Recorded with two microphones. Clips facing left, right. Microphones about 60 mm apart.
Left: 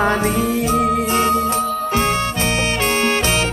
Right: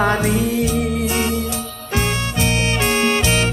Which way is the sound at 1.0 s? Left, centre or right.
Left.